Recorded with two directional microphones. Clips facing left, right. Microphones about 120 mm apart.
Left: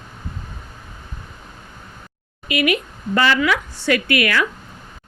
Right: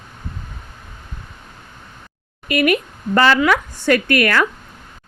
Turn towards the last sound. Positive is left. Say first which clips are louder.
# right 3 dB
turn(degrees=-45)  # may be behind; listen again after turning